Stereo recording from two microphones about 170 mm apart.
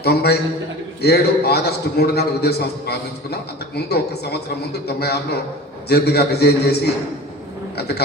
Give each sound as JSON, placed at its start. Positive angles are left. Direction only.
{"t": 0.0, "sound": "a man's voice", "side_deg": 70}
{"t": 7.8, "sound": "a man's voice", "side_deg": 70}